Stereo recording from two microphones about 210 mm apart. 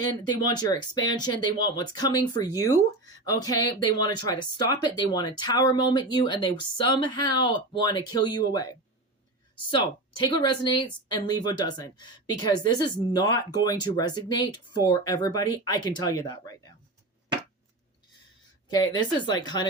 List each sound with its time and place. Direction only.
0.0 s speech: 20° left (ahead or behind)
9.6 s speech: 20° left (ahead or behind)
18.7 s speech: 20° left (ahead or behind)